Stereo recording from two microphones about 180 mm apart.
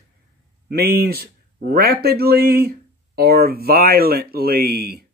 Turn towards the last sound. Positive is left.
turn(degrees=-60)  # may be behind; listen again after turning